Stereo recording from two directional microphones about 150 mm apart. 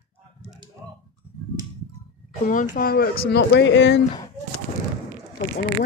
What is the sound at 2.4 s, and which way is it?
Speech, 65° left (ahead or behind).